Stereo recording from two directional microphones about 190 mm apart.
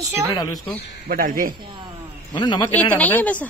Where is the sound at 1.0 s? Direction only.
45° right (ahead or behind).